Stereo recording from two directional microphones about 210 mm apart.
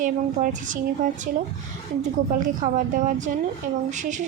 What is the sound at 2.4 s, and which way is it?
Speech, 40° right (ahead or behind).